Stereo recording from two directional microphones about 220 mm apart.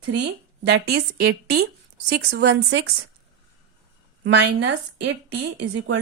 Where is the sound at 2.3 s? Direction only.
50° right (ahead or behind).